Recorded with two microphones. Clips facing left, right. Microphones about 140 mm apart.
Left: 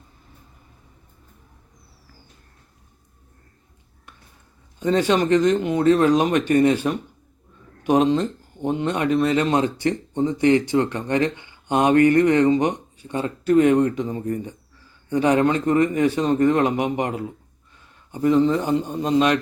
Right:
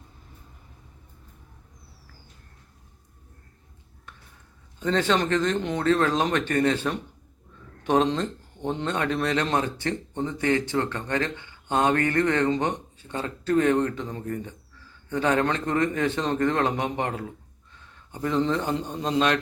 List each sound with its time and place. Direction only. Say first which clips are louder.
4.8 s speech: left 4 dB; 10° left (ahead or behind)